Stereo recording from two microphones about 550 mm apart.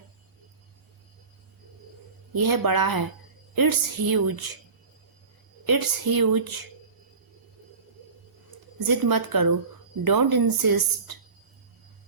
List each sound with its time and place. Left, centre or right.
2.3 s speech: right
5.6 s speech: right
8.8 s speech: right